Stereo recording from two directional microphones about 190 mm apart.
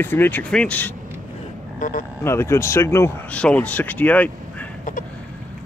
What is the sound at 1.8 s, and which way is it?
Speech, 45° left (ahead or behind).